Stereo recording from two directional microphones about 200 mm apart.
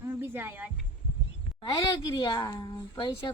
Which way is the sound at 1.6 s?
25° left (ahead or behind).